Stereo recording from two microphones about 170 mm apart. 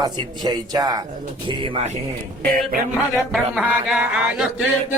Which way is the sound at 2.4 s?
55° right (ahead or behind).